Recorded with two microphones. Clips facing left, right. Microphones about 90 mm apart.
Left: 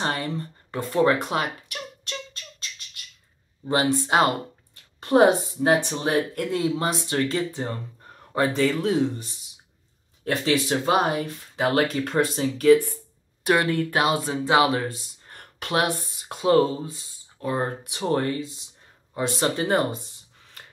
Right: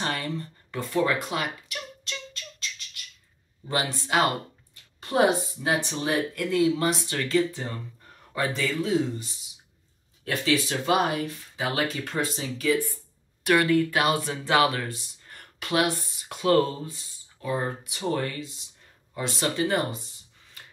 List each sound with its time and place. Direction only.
0.0 s speech: 30° left (ahead or behind); by 2.1 s 45° left (ahead or behind)
3.6 s speech: 40° left (ahead or behind)
11.5 s speech: 55° left (ahead or behind)
13.5 s speech: 35° left (ahead or behind)
15.2 s a sound: 40° left (ahead or behind)
16.3 s speech: 25° left (ahead or behind)
17.4 s speech: 40° left (ahead or behind)